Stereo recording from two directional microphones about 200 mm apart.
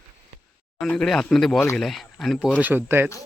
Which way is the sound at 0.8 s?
5° left (ahead or behind).